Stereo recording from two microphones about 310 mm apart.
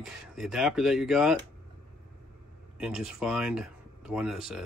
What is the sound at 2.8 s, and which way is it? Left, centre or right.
Speech, centre.